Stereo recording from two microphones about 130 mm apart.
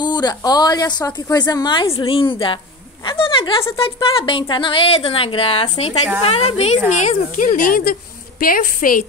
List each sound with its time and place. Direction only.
0.0 s a woman's voice: 35° left (ahead or behind); by 6.8 s 55° left (ahead or behind)
7.0 s speech: 80° left